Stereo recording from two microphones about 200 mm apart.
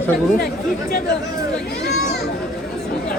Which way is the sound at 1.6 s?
55° left (ahead or behind).